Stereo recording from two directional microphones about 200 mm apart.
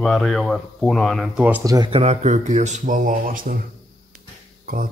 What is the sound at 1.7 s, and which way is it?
Speech, 25° right (ahead or behind).